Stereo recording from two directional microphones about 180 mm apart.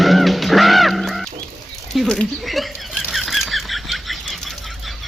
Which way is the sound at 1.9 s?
5° left (ahead or behind).